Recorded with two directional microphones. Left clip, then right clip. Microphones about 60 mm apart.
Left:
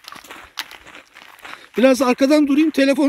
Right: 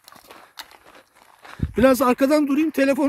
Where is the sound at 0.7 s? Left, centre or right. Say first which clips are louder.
Left 8 dB; right.